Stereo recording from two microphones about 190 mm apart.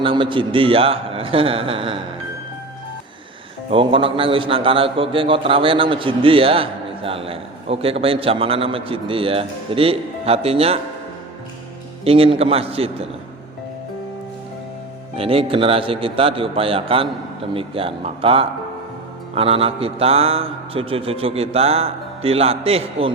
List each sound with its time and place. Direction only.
0.0 s a man's voice: 25° right (ahead or behind)
3.7 s a man's voice: 30° right (ahead or behind)
12.0 s a man's voice: 30° right (ahead or behind)
15.1 s a man's voice: 30° right (ahead or behind)